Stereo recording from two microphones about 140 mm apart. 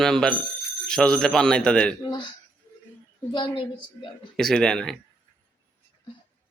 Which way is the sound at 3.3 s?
35° left (ahead or behind).